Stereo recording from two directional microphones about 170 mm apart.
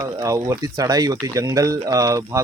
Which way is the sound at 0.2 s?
20° right (ahead or behind).